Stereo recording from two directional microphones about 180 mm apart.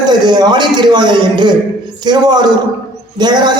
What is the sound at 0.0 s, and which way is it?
A man's voice, 25° right (ahead or behind).